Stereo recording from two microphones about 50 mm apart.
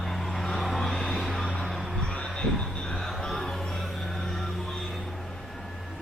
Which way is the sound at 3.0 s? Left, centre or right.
Centre.